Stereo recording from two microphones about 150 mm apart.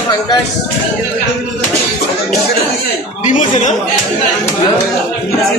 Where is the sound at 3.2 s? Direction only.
55° left (ahead or behind).